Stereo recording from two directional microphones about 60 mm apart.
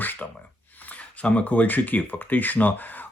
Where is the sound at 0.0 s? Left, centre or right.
Left.